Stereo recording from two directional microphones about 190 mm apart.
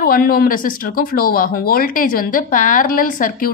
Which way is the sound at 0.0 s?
50° left (ahead or behind).